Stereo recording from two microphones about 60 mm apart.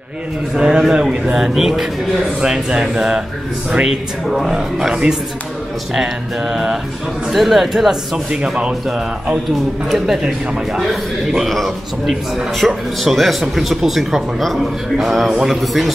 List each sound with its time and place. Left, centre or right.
0.6 s speech: centre
9.8 s speech: centre